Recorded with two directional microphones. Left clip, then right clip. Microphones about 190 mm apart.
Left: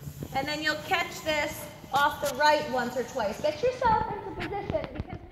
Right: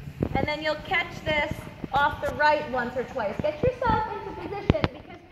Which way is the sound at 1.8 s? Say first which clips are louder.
Right 2 dB; centre (ahead or behind).